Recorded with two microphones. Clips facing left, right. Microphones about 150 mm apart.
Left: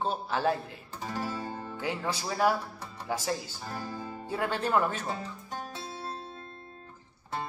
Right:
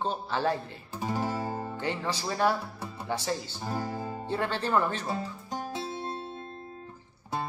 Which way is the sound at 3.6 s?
20° right (ahead or behind).